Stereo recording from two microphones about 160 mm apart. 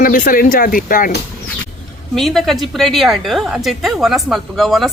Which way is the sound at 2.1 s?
Centre (ahead or behind).